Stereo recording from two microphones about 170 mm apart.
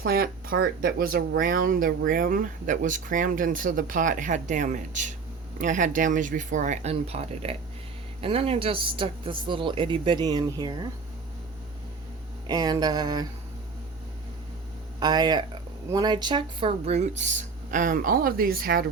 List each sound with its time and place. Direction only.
0.0 s speech: 60° right (ahead or behind); by 10.8 s 25° right (ahead or behind)
12.5 s speech: 25° right (ahead or behind)
14.9 s speech: 25° right (ahead or behind); by 18.9 s 60° right (ahead or behind)